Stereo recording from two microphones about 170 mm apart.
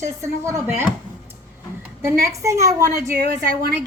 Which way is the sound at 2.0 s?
15° right (ahead or behind).